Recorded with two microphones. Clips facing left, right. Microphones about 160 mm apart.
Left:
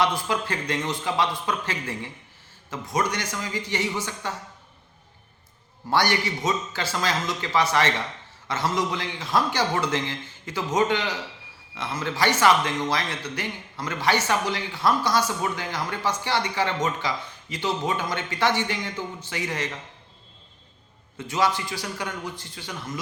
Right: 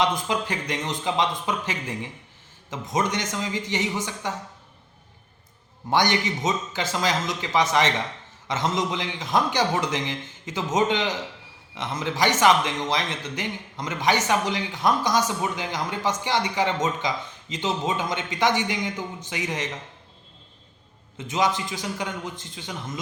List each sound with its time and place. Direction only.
0.0 s a man's voice: 20° right (ahead or behind)
5.9 s a man's voice: 20° right (ahead or behind)
21.2 s a man's voice: 20° right (ahead or behind)